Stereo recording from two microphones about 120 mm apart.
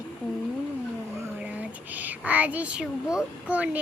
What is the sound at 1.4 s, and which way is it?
Speech, 15° right (ahead or behind).